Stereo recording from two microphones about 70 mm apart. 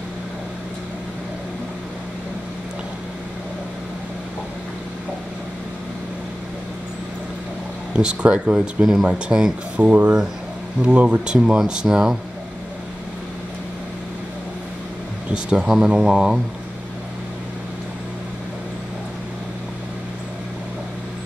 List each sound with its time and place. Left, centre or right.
8.0 s speech: centre
9.8 s speech: right
15.3 s speech: centre